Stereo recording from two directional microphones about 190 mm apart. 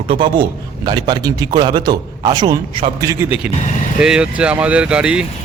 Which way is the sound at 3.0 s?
10° right (ahead or behind).